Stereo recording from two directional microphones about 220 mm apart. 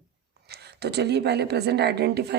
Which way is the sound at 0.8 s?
50° right (ahead or behind).